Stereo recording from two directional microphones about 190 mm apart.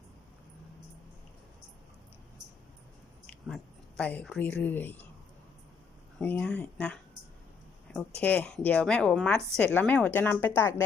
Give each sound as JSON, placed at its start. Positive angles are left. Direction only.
{"t": 3.2, "sound": "speech", "side_deg": 0}
{"t": 6.1, "sound": "a woman's voice", "side_deg": 5}